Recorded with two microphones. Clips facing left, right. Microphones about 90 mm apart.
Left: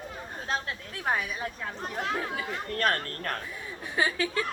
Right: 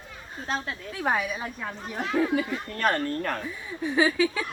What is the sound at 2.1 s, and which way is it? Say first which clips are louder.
Speech: right 8 dB; centre (ahead or behind).